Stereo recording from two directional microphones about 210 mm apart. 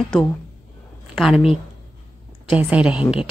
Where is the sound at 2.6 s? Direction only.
5° right (ahead or behind).